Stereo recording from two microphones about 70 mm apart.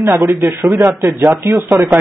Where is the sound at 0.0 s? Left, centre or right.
Right.